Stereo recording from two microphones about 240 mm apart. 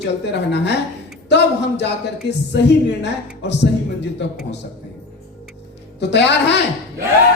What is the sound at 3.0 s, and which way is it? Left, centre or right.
Speech, left.